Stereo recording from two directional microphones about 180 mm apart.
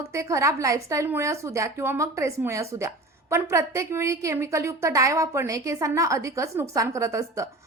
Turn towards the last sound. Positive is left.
turn(degrees=-15)  # may be behind; listen again after turning